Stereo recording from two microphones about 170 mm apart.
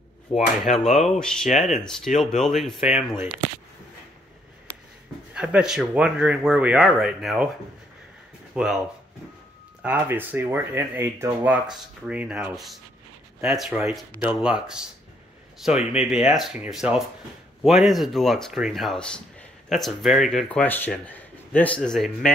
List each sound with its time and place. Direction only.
0.3 s speech: 40° left (ahead or behind)
0.7 s speech: centre (ahead or behind)
5.3 s speech: 5° right (ahead or behind)
8.5 s speech: 5° right (ahead or behind)
9.8 s speech: 10° right (ahead or behind)